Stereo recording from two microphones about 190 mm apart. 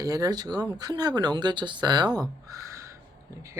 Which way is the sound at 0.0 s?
20° right (ahead or behind).